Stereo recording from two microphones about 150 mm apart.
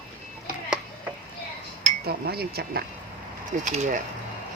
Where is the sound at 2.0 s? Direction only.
90° right.